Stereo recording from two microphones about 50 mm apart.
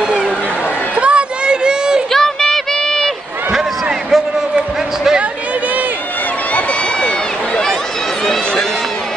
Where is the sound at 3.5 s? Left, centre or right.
Centre.